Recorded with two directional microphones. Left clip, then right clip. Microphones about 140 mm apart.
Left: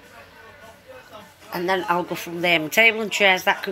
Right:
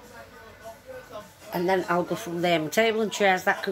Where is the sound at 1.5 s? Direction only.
15° right (ahead or behind).